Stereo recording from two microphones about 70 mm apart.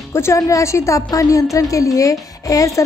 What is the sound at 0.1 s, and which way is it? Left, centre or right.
A woman's voice, left.